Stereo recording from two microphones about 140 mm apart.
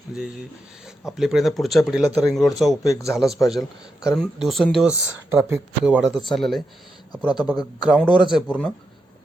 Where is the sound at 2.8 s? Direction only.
25° left (ahead or behind).